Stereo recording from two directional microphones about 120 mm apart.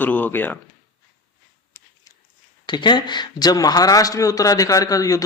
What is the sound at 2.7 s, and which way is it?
A man's voice, 40° left (ahead or behind).